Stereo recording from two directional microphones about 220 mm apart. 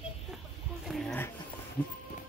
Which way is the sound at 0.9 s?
Centre (ahead or behind).